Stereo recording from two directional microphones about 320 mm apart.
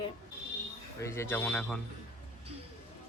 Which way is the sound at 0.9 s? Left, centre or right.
Centre.